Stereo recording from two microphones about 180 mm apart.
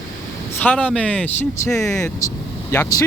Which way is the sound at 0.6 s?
5° left (ahead or behind).